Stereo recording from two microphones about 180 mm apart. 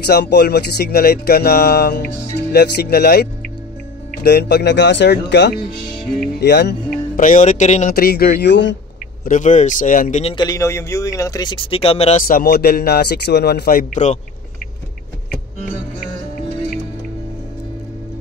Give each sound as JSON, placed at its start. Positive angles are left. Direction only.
{"t": 0.0, "sound": "speech", "side_deg": 65}
{"t": 7.2, "sound": "speech", "side_deg": 45}
{"t": 7.9, "sound": "speech", "side_deg": 60}
{"t": 9.2, "sound": "speech", "side_deg": 45}
{"t": 10.2, "sound": "speech", "side_deg": 25}
{"t": 12.3, "sound": "speech", "side_deg": 60}